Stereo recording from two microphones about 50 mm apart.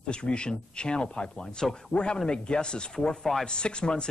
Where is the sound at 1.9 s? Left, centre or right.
Centre.